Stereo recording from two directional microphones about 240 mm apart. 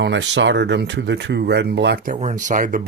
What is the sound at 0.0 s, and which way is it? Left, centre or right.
Speech, right.